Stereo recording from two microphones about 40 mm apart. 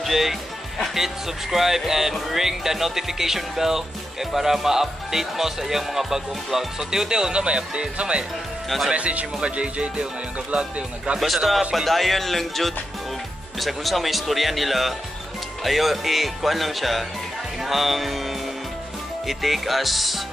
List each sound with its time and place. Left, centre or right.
0.0 s speech: centre
0.9 s music: centre; by 8.3 s right
8.6 s speech: centre
8.9 s speech: right
11.1 s speech: centre